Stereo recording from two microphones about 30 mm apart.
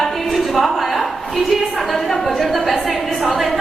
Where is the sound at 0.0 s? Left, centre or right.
Centre.